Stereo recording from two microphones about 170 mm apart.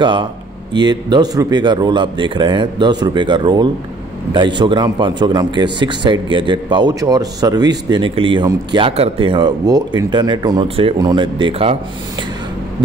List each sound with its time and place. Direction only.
0.0 s a man's voice: 30° right (ahead or behind)